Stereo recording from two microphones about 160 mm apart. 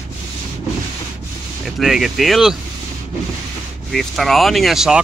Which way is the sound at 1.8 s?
Centre (ahead or behind).